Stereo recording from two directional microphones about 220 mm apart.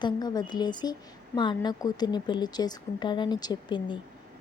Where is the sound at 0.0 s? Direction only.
20° left (ahead or behind).